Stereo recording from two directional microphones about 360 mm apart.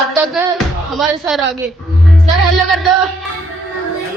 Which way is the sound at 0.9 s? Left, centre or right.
Centre.